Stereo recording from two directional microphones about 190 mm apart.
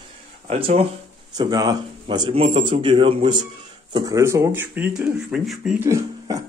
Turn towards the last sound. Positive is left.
turn(degrees=-15)  # may be behind; listen again after turning